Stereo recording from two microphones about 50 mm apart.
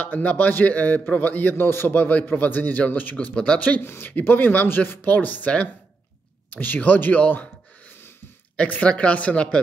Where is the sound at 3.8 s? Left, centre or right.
Left.